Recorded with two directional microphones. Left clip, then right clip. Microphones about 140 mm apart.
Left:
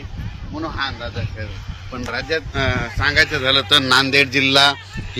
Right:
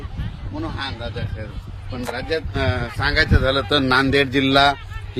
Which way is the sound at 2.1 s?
30° right (ahead or behind).